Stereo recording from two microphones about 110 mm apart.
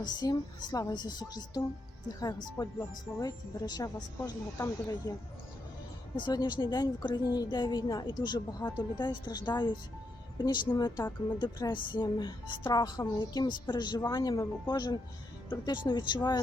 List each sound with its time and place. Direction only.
0.0 s a woman's voice: 35° left (ahead or behind)
6.1 s a woman's voice: 40° left (ahead or behind)